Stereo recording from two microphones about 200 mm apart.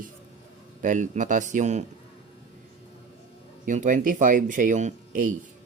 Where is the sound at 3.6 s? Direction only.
40° right (ahead or behind).